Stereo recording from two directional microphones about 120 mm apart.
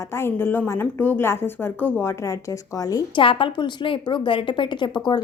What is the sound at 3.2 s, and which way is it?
A woman's voice, 45° left (ahead or behind).